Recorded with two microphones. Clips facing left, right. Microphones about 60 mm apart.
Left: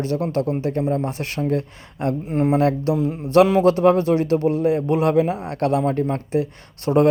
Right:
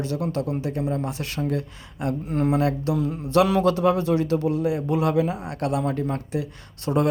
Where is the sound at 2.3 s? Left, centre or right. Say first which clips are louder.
Left 3 dB; centre.